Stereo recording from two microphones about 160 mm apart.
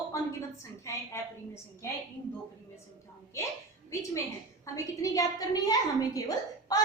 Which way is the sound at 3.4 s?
20° left (ahead or behind).